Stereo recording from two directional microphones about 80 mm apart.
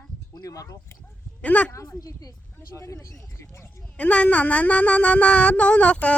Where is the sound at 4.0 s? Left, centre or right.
Centre.